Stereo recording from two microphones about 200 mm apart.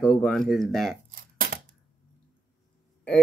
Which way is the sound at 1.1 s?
50° right (ahead or behind).